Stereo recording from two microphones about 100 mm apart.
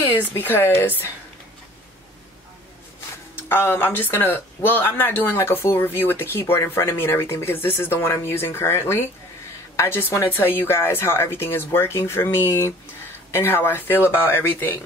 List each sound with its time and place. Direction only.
0.0 s speech: 20° left (ahead or behind)
3.3 s speech: 20° left (ahead or behind)